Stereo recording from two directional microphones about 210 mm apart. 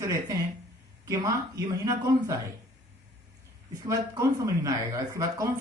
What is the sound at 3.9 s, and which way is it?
Speech, 15° right (ahead or behind).